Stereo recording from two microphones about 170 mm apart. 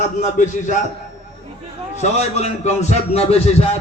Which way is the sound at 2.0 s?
40° left (ahead or behind).